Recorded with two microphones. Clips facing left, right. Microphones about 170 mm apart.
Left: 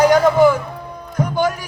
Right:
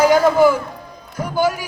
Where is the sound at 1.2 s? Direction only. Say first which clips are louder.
Even; 5° right (ahead or behind).